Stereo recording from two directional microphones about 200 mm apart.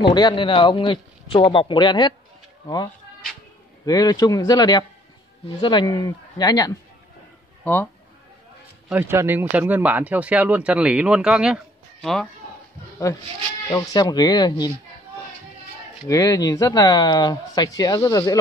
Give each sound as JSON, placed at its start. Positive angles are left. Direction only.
{"t": 0.1, "sound": "a man's voice", "side_deg": 20}
{"t": 3.8, "sound": "a man's voice", "side_deg": 20}
{"t": 8.8, "sound": "speech", "side_deg": -10}
{"t": 13.7, "sound": "a man's voice", "side_deg": 20}
{"t": 16.1, "sound": "speech", "side_deg": 15}